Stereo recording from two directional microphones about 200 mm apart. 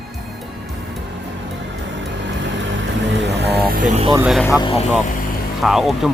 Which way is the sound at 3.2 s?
60° right (ahead or behind).